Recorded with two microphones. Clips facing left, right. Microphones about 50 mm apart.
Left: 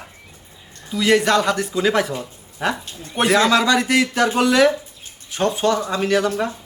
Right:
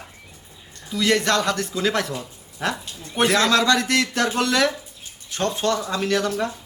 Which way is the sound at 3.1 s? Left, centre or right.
Centre.